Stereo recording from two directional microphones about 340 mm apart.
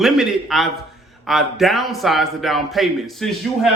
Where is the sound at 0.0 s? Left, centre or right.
Centre.